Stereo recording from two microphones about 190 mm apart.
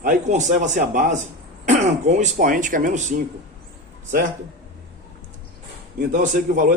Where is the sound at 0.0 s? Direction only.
40° right (ahead or behind).